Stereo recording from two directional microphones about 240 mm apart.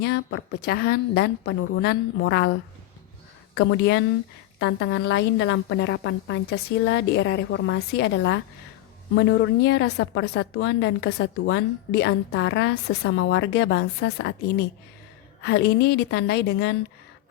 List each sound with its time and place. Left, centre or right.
0.0 s a woman's voice: left
3.5 s a woman's voice: left
15.4 s a woman's voice: left